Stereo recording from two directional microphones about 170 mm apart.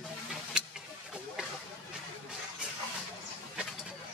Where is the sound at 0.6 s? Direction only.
5° right (ahead or behind).